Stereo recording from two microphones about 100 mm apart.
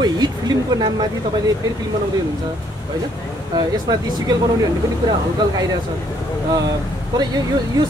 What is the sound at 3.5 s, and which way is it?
Speech, 40° right (ahead or behind).